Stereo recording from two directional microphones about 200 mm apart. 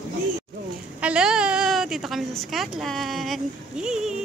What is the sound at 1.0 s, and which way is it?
A woman's voice, 5° right (ahead or behind).